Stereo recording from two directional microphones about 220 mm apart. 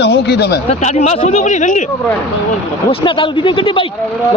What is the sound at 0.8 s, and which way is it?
Speech, 30° left (ahead or behind).